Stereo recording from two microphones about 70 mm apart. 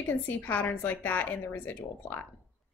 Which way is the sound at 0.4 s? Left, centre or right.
Left.